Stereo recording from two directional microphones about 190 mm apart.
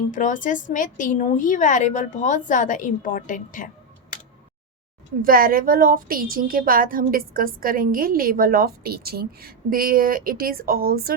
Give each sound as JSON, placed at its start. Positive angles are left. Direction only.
{"t": 0.1, "sound": "a woman's voice", "side_deg": 40}
{"t": 5.2, "sound": "a woman's voice", "side_deg": -50}